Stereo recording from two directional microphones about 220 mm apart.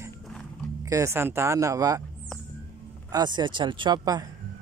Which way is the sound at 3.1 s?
20° right (ahead or behind).